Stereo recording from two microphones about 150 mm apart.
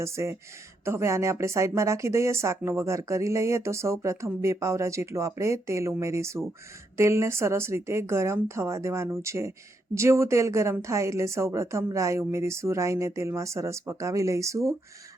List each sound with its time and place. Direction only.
0.0 s a woman's voice: 20° right (ahead or behind)